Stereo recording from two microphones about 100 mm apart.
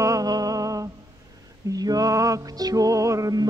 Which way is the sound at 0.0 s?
35° right (ahead or behind).